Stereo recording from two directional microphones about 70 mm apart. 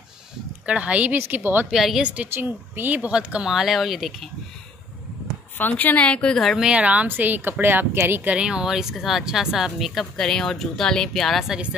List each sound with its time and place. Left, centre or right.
0.7 s a woman's voice: centre
1.1 s a woman's voice: right
1.7 s speech: centre
2.0 s a woman's voice: centre
2.3 s a woman's voice: right
3.5 s speech: centre
5.6 s a woman's voice: left; by 6.6 s centre
6.6 s a woman's voice: centre; by 8.3 s right
8.3 s speech: centre